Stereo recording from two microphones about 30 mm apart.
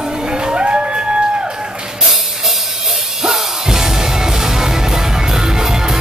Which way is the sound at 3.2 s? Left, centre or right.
Centre.